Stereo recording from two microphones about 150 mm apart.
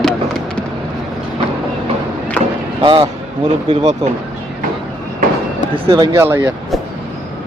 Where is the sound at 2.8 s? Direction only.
35° right (ahead or behind).